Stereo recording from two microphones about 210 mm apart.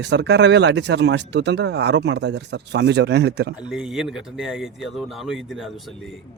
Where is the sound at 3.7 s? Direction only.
5° right (ahead or behind).